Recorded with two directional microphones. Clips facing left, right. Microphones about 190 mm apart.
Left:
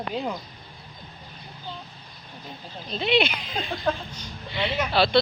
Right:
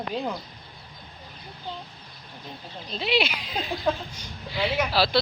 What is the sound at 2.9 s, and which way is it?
A woman's voice, centre (ahead or behind).